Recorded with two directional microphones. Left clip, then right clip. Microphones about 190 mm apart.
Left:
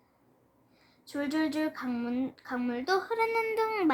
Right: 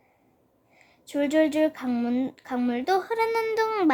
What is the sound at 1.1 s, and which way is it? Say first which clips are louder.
Speech: right 9 dB; 45° right (ahead or behind).